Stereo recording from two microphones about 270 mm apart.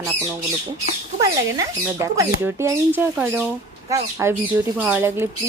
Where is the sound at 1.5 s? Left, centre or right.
Centre.